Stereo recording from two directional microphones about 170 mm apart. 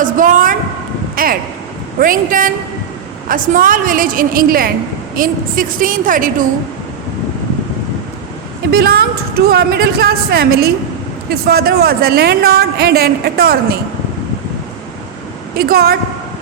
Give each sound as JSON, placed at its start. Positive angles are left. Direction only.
{"t": 0.0, "sound": "a sound", "side_deg": -50}
{"t": 2.0, "sound": "speech", "side_deg": -55}
{"t": 8.7, "sound": "a woman's voice", "side_deg": -65}
{"t": 15.5, "sound": "speech", "side_deg": -65}